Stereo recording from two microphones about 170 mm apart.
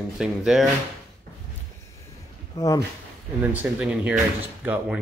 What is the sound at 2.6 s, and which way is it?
Speech, 20° left (ahead or behind).